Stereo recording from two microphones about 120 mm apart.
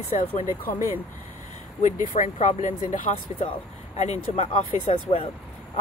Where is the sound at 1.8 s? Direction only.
85° left.